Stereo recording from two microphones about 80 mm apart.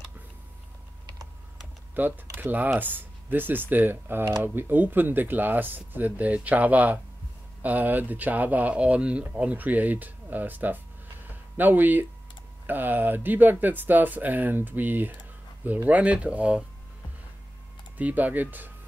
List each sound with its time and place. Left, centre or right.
2.0 s speech: right
17.9 s speech: centre